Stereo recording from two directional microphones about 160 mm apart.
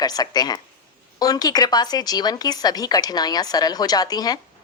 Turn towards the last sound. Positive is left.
turn(degrees=25)  # may be behind; listen again after turning